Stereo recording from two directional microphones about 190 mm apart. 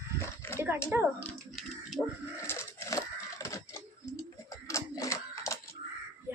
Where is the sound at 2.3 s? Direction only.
15° left (ahead or behind).